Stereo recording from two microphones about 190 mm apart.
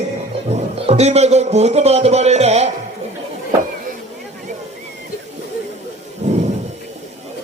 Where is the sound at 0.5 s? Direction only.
35° right (ahead or behind).